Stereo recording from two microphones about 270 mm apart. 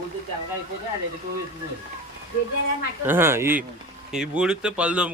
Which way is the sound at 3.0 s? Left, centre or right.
Centre.